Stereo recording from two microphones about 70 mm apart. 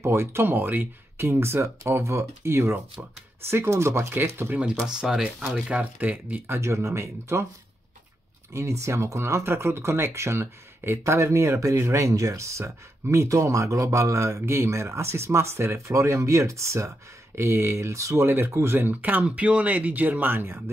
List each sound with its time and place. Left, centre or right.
0.0 s speech: right
5.0 s speech: centre
5.7 s speech: right
8.5 s speech: right